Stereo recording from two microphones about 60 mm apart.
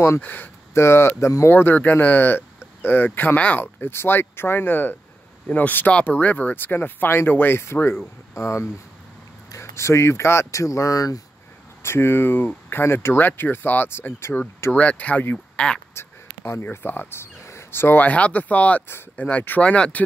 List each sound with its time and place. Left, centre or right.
0.2 s speech: left
0.7 s speech: left
3.3 s speech: left
3.6 s speech: left
8.4 s speech: left
10.5 s speech: left
11.8 s speech: left
14.8 s speech: left
15.5 s speech: centre
15.9 s a sound: left
16.7 s speech: left
17.2 s a sound: left
18.0 s speech: left